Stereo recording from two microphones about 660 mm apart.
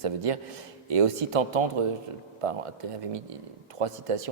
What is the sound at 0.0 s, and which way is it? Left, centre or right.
Speech, right.